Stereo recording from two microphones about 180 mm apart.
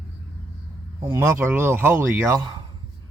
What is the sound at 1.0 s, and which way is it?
Speech, 15° right (ahead or behind).